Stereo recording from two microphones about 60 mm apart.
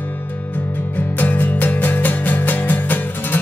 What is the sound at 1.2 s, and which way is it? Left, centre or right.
Music, left.